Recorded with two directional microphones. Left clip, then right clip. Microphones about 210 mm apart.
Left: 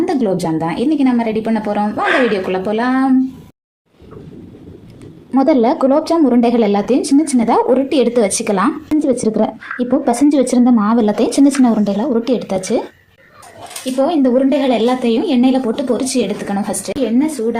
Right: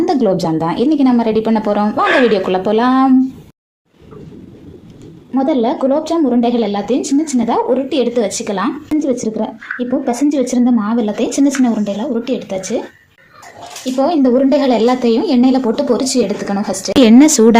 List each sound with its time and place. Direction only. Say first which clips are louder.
0.0 s a woman's voice: right 3 dB; 10° right (ahead or behind)
5.3 s a woman's voice: left 2 dB; 20° left (ahead or behind)
9.3 s a woman's voice: left 3 dB; 25° left (ahead or behind)
13.9 s a woman's voice: right 1 dB; 10° right (ahead or behind)
17.1 s speech: right 10 dB; 50° right (ahead or behind)